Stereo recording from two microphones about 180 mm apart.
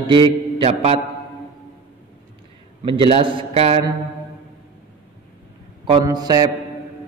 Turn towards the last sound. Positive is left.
turn(degrees=-20)  # may be behind; listen again after turning